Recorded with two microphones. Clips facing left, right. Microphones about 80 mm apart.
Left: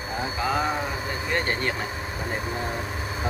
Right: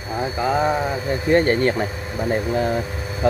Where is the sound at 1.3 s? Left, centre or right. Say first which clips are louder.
Right 11 dB; right.